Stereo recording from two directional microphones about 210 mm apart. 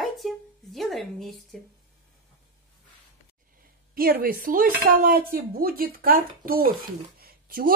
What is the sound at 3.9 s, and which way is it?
A woman's voice, 45° right (ahead or behind).